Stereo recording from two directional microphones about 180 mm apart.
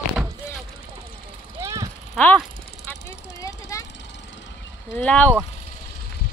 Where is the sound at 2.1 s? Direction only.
5° left (ahead or behind).